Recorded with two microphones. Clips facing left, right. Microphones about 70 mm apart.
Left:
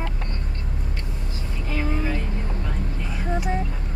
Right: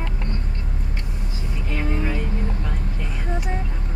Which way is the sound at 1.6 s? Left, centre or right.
Centre.